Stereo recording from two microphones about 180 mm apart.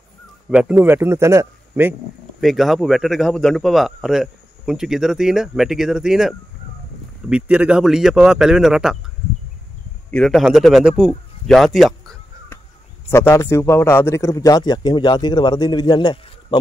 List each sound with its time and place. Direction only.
0.5 s a man's voice: 10° right (ahead or behind)
2.4 s speech: centre (ahead or behind)
10.1 s speech: centre (ahead or behind)
13.1 s a man's voice: 15° left (ahead or behind)